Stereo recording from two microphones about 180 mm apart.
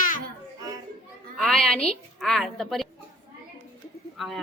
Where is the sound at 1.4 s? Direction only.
5° left (ahead or behind).